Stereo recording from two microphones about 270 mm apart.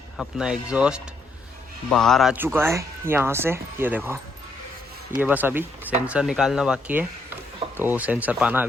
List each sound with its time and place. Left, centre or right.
0.2 s speech: centre
5.2 s speech: centre